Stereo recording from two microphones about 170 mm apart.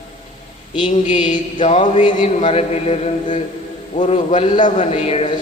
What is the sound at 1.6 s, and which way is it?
A man's voice, 40° left (ahead or behind).